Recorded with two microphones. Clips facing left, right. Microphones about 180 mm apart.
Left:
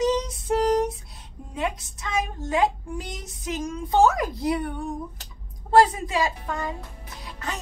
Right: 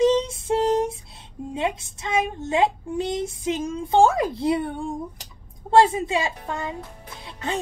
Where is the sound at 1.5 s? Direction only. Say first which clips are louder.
Right 2 dB; 25° right (ahead or behind).